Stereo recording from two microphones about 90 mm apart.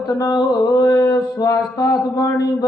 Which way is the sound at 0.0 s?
45° left (ahead or behind).